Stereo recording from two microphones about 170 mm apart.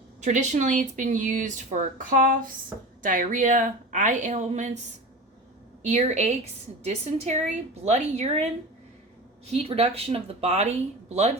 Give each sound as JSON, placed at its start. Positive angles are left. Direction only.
{"t": 0.2, "sound": "speech", "side_deg": -45}
{"t": 5.9, "sound": "a woman's voice", "side_deg": -40}
{"t": 9.5, "sound": "a woman's voice", "side_deg": -35}